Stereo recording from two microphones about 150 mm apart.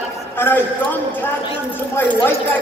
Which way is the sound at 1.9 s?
15° left (ahead or behind).